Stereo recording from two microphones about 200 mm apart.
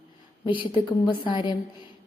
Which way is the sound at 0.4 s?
25° left (ahead or behind).